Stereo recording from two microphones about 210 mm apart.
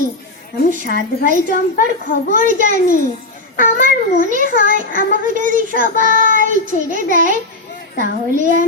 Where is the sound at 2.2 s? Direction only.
40° right (ahead or behind).